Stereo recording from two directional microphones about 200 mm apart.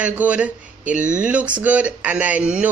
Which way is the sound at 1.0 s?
40° right (ahead or behind).